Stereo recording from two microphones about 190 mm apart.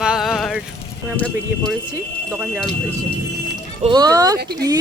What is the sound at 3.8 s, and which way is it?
Speech, 20° right (ahead or behind).